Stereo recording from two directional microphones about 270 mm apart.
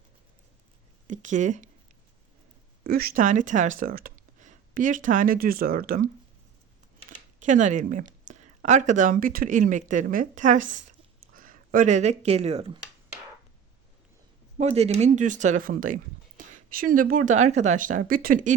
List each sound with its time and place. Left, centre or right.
1.0 s speech: right
2.8 s speech: right
7.4 s speech: right
14.6 s speech: right